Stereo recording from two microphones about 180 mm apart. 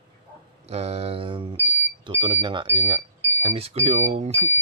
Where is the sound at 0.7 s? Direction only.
35° right (ahead or behind).